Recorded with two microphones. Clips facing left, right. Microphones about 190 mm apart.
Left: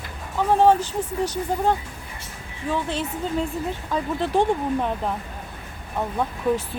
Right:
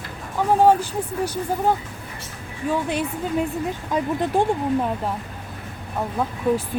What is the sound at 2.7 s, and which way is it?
Speech, 15° right (ahead or behind).